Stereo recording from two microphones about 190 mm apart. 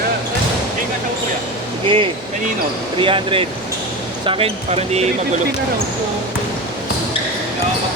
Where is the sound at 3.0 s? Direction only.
25° right (ahead or behind).